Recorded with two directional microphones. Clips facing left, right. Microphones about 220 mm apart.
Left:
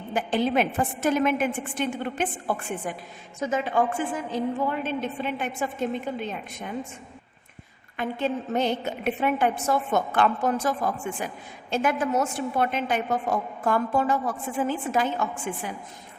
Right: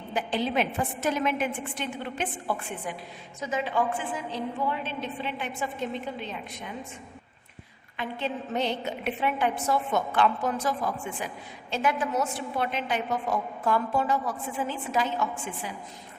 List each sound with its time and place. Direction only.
0.1 s a woman's voice: 50° left (ahead or behind)
7.9 s a woman's voice: 45° left (ahead or behind)